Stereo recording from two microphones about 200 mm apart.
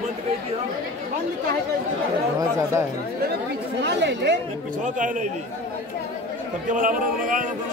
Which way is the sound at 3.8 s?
60° right (ahead or behind).